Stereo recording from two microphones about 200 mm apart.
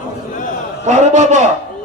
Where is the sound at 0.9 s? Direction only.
35° right (ahead or behind).